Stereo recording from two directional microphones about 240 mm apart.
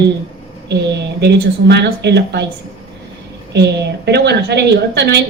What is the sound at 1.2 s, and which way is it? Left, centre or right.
A woman's voice, right.